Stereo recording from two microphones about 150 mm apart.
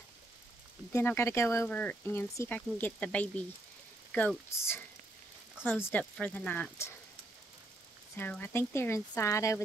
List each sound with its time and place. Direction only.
0.9 s speech: 20° left (ahead or behind)
8.2 s speech: 15° left (ahead or behind)